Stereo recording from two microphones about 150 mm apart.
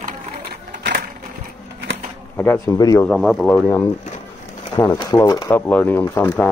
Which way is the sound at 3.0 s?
5° left (ahead or behind).